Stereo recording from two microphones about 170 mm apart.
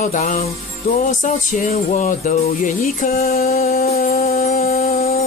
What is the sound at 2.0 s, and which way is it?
Speech, 40° left (ahead or behind).